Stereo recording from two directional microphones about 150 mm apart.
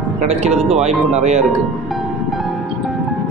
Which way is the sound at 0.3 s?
45° right (ahead or behind).